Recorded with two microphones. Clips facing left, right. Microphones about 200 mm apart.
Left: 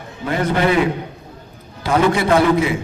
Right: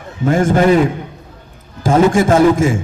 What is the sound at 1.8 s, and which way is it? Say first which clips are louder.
A man's voice: right 5 dB; 45° right (ahead or behind).